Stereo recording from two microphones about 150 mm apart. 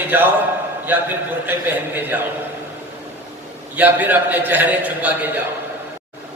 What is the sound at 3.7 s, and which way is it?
A man's voice, 10° right (ahead or behind).